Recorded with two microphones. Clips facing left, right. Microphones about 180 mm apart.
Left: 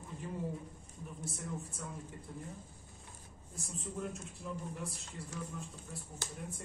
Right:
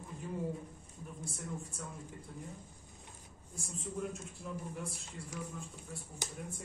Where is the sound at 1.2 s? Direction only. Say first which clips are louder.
Left 1 dB; centre (ahead or behind).